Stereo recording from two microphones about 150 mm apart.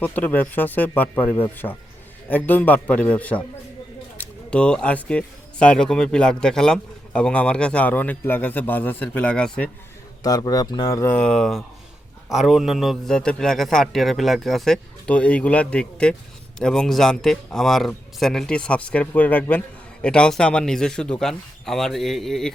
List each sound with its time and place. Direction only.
0.0 s speech: 10° left (ahead or behind)
10.2 s speech: 25° left (ahead or behind)
11.1 s speech: 5° left (ahead or behind)